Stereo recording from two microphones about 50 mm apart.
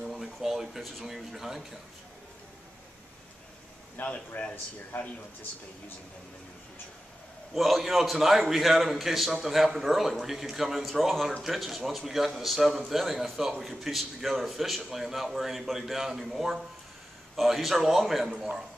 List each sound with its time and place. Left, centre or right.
0.0 s speech: centre
3.9 s speech: left
7.5 s a man's voice: centre